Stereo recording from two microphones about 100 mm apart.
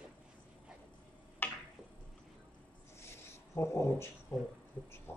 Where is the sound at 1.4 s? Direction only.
20° left (ahead or behind).